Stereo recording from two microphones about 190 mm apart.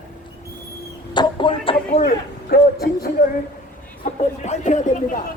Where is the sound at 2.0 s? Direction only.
55° left (ahead or behind).